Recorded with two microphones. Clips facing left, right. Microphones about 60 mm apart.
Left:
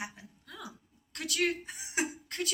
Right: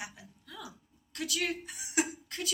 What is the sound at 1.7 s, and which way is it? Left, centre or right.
Speech, left.